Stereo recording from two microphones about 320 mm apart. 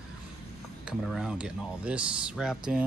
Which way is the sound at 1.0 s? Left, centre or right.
Centre.